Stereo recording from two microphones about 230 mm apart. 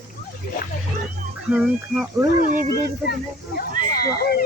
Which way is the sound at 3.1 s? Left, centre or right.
Left.